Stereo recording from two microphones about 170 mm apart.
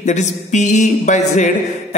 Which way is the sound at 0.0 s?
45° left (ahead or behind).